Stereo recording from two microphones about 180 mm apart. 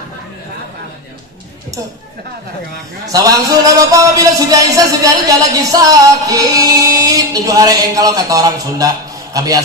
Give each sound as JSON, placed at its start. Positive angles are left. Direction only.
{"t": 3.1, "sound": "a man's voice", "side_deg": -20}